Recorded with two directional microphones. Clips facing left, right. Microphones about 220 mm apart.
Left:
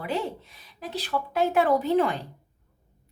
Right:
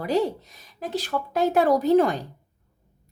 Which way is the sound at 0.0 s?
40° right (ahead or behind).